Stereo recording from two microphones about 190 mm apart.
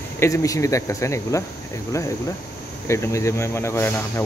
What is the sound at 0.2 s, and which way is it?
Speech, 15° left (ahead or behind).